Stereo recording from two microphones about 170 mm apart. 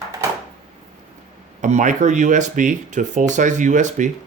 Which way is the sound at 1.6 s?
45° right (ahead or behind).